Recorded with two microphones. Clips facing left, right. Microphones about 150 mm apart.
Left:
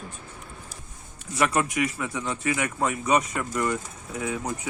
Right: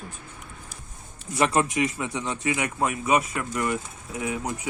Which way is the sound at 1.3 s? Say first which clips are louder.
Right 2 dB; 25° right (ahead or behind).